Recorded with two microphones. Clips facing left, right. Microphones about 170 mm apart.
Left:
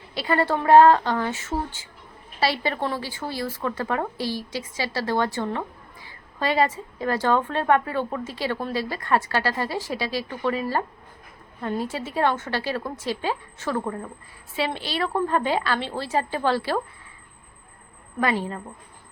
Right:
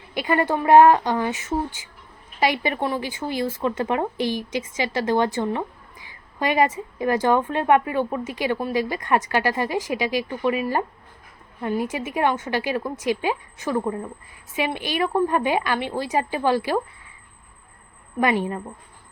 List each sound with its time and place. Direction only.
0.1 s speech: 15° right (ahead or behind)
18.2 s speech: 15° right (ahead or behind)